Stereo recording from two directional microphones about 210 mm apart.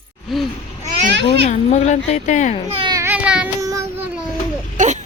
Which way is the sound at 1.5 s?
35° left (ahead or behind).